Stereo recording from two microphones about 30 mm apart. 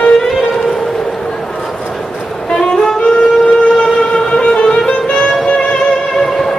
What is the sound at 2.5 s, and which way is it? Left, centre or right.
Music, left.